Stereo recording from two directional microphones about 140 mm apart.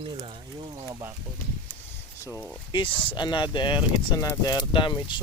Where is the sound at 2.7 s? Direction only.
35° left (ahead or behind).